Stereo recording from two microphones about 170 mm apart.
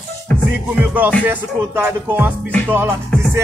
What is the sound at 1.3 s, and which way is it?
Speech, 10° right (ahead or behind).